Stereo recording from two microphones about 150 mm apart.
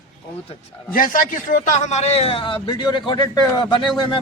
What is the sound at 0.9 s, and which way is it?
A man's voice, 70° left (ahead or behind).